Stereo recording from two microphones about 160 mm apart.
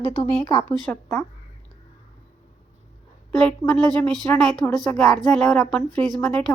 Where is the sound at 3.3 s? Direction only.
5° left (ahead or behind).